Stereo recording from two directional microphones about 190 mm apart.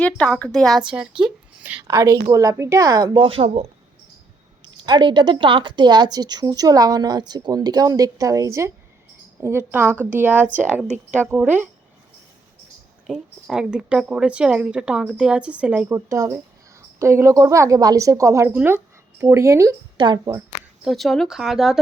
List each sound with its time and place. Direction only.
0.0 s speech: 5° left (ahead or behind)
1.2 s a sound: 10° right (ahead or behind)
2.3 s a woman's voice: 15° right (ahead or behind)
13.1 s a woman's voice: centre (ahead or behind); by 20.4 s 20° right (ahead or behind)
20.8 s speech: centre (ahead or behind)